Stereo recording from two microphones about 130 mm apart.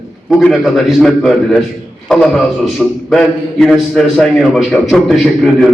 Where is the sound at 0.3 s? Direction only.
Centre (ahead or behind).